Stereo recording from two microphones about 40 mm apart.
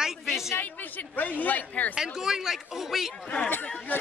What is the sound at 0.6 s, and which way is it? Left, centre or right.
A man's voice, left.